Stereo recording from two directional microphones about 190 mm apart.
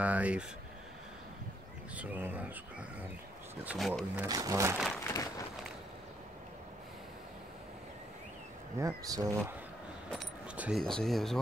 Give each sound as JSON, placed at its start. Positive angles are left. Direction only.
{"t": 0.0, "sound": "speech", "side_deg": -5}
{"t": 2.0, "sound": "speech", "side_deg": -10}
{"t": 3.6, "sound": "speech", "side_deg": 0}
{"t": 4.3, "sound": "speech", "side_deg": -20}
{"t": 5.0, "sound": "a sound", "side_deg": 15}
{"t": 8.7, "sound": "speech", "side_deg": -20}